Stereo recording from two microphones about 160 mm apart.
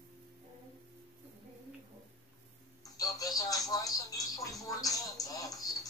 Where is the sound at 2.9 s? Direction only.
25° left (ahead or behind).